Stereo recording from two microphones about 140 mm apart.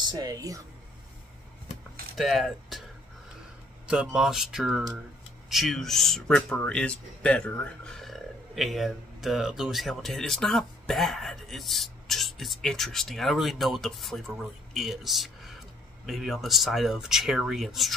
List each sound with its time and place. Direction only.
0.0 s speech: 30° right (ahead or behind)
2.1 s speech: centre (ahead or behind)
3.8 s speech: 5° right (ahead or behind)